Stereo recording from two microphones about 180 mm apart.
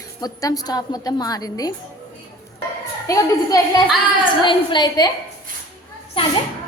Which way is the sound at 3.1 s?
20° left (ahead or behind).